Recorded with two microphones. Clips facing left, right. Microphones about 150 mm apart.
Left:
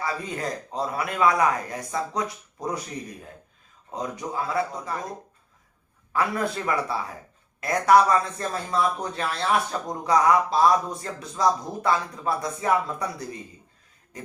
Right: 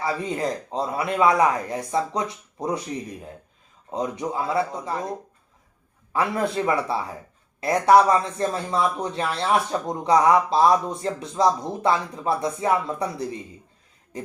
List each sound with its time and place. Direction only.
0.0 s speech: 25° right (ahead or behind)
3.9 s speech: 25° right (ahead or behind)
6.1 s speech: 25° right (ahead or behind)